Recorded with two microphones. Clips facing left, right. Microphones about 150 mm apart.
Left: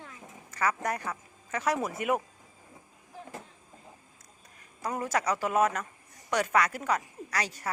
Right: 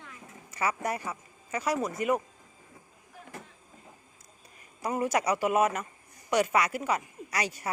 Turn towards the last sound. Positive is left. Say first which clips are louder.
# right 1 dB
turn(degrees=-10)  # may be behind; listen again after turning